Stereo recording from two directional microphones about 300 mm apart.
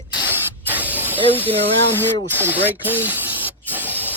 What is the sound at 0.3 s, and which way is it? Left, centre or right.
Hiss, centre.